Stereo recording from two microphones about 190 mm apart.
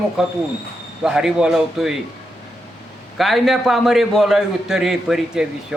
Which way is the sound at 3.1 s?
Centre (ahead or behind).